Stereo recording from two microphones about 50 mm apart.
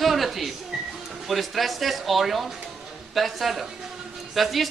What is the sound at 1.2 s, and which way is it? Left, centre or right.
Speech, centre.